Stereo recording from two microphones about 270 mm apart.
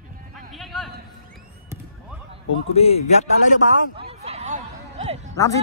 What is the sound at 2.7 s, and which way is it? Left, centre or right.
Speech, left.